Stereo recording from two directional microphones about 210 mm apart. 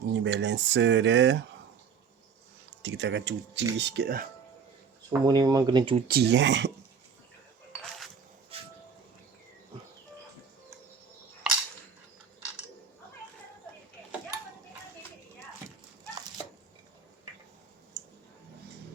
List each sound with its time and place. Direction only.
0.2 s speech: 60° right (ahead or behind)
2.8 s speech: 60° right (ahead or behind)
5.2 s speech: 20° right (ahead or behind)
6.1 s speech: 50° right (ahead or behind)
11.4 s cap gun: 5° right (ahead or behind)